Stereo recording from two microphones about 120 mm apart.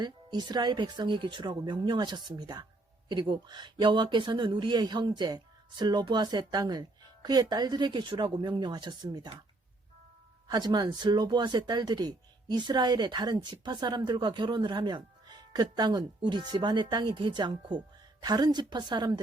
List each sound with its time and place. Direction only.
0.0 s speech: 35° right (ahead or behind)
10.5 s speech: 35° right (ahead or behind)